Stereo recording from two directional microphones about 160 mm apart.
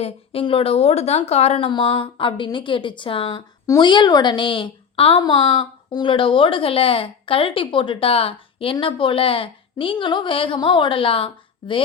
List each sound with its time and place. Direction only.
0.0 s a woman's voice: 35° left (ahead or behind)